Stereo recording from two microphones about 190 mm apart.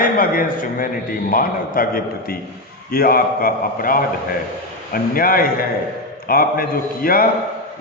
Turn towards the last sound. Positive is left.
turn(degrees=50)  # may be behind; listen again after turning